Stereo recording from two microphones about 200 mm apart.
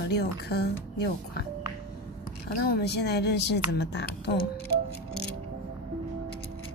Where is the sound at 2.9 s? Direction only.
55° left (ahead or behind).